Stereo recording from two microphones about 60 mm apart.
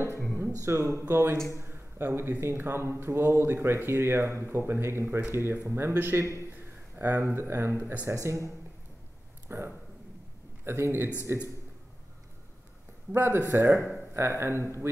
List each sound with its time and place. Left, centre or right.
0.6 s speech: right
1.6 s a sound: right
2.4 s speech: right
8.1 s speech: right
9.5 s speech: right
13.1 s speech: right